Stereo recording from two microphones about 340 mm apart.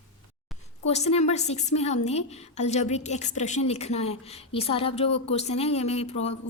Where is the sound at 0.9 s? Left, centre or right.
Centre.